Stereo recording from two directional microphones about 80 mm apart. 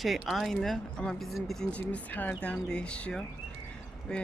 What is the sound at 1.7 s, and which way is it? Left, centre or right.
Speech, centre.